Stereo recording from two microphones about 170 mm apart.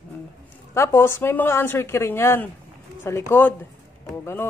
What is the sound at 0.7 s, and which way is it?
A man's voice, 15° left (ahead or behind).